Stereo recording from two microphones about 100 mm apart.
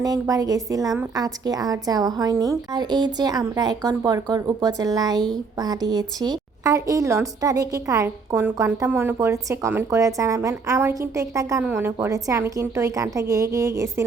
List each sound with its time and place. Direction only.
0.0 s a woman's voice: 35° right (ahead or behind); by 9.1 s 20° right (ahead or behind)
9.2 s a woman's voice: 30° right (ahead or behind)